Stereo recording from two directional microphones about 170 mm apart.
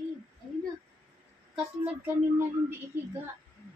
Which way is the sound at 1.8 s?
10° right (ahead or behind).